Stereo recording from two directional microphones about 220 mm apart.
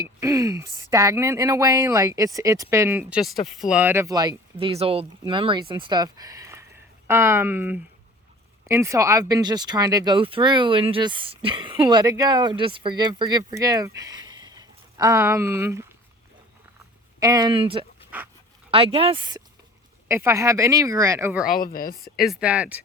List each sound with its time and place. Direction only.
0.0 s speech: 15° right (ahead or behind)
17.2 s speech: 15° right (ahead or behind)
21.6 s speech: 40° left (ahead or behind)
22.0 s speech: centre (ahead or behind)